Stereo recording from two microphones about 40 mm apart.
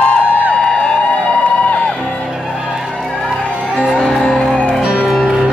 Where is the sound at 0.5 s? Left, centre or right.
Left.